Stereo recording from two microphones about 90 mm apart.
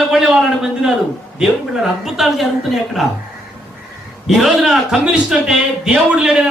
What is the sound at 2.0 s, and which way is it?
A man's voice, centre (ahead or behind).